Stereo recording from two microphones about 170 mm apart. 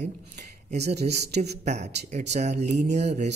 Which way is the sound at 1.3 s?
40° right (ahead or behind).